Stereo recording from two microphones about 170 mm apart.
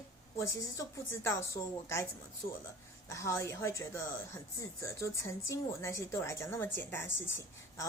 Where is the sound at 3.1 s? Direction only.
20° left (ahead or behind).